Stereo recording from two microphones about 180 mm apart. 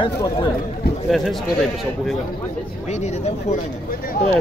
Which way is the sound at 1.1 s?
Centre (ahead or behind).